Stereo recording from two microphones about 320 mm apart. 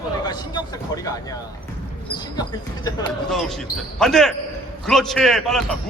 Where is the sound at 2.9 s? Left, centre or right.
Centre.